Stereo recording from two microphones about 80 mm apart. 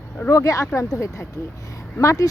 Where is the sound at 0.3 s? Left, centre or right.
Left.